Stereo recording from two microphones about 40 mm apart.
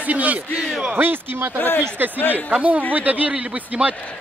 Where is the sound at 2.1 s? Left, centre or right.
Left.